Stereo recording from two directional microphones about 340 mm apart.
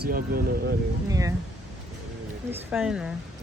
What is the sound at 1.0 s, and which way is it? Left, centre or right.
Speech, centre.